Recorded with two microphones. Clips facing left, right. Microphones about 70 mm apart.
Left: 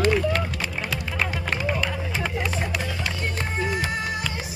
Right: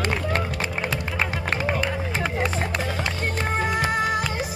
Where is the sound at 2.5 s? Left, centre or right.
Right.